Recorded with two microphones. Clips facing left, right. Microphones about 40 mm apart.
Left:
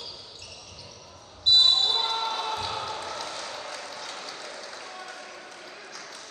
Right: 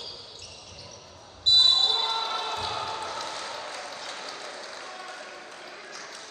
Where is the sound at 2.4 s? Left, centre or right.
Centre.